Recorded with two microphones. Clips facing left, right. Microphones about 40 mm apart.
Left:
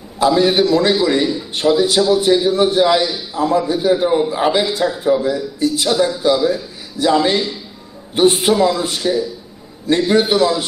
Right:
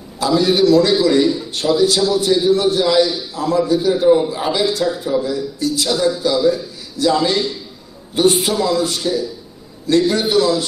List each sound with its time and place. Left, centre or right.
0.2 s a man's voice: left